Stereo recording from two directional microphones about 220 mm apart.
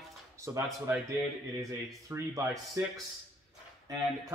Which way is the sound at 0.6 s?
15° right (ahead or behind).